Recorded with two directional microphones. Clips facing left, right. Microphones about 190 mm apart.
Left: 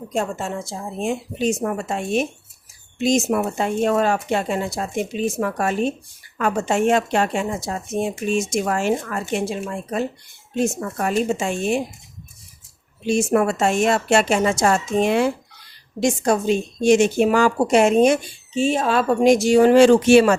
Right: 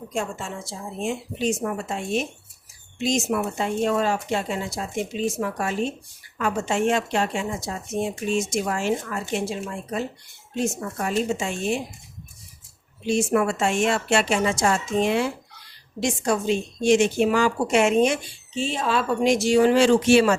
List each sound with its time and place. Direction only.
0.1 s a woman's voice: 40° left (ahead or behind)
13.1 s a woman's voice: 45° left (ahead or behind)